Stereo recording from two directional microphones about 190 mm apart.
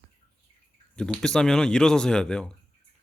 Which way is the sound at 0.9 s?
5° left (ahead or behind).